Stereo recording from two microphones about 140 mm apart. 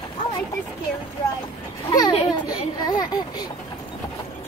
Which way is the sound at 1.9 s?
25° left (ahead or behind).